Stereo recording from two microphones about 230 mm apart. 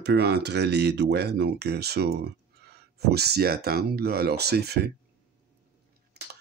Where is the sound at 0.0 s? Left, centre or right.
Right.